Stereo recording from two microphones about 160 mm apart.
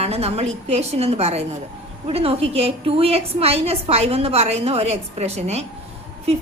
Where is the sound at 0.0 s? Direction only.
40° right (ahead or behind).